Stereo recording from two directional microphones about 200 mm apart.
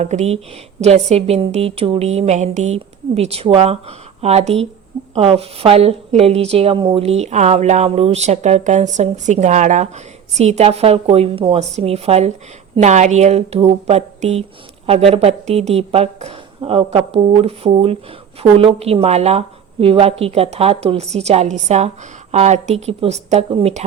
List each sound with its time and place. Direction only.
0.0 s a woman's voice: 35° right (ahead or behind)